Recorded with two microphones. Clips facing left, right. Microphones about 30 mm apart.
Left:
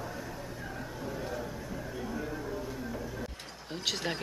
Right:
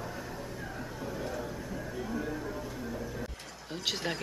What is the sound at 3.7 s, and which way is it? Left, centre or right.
Speech, centre.